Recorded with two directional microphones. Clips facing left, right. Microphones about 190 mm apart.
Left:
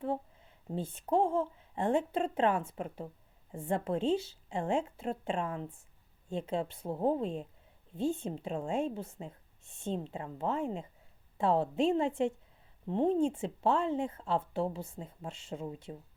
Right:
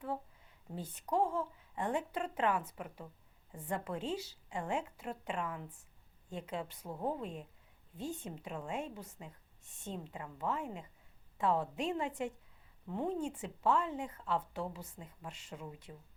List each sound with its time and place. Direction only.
0.7 s speech: 25° left (ahead or behind)